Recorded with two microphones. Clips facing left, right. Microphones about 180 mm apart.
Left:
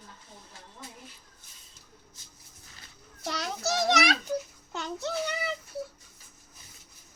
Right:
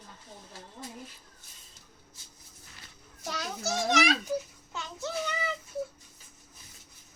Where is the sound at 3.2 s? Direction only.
70° left (ahead or behind).